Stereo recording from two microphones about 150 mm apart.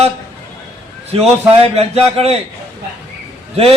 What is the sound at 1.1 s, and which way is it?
A man's voice, 40° right (ahead or behind).